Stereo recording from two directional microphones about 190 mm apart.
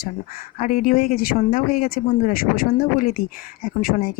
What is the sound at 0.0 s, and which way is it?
Speech, 50° left (ahead or behind).